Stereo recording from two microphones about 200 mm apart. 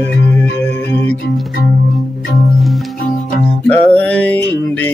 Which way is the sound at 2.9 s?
40° left (ahead or behind).